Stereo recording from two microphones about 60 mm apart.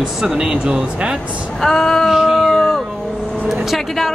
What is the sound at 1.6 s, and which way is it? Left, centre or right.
Female singing, centre.